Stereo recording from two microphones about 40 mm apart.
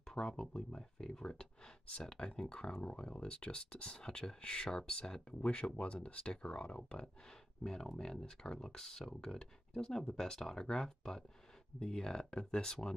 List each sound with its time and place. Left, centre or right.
0.1 s speech: centre